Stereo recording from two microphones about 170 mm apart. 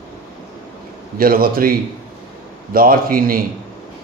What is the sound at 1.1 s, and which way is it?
A man's voice, 60° right (ahead or behind).